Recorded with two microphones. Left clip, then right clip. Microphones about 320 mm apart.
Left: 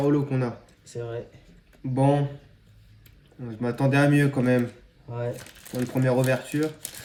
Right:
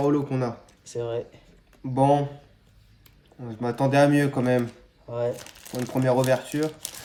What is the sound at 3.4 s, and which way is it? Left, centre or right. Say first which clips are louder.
Speech: right 1 dB; right.